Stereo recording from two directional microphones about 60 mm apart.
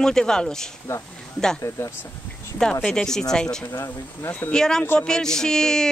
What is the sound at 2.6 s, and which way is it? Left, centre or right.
Speech, centre.